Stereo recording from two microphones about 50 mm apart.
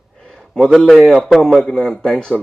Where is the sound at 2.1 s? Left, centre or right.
Left.